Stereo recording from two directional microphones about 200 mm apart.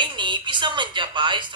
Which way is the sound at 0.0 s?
25° right (ahead or behind).